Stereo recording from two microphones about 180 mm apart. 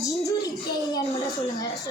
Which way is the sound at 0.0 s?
20° left (ahead or behind).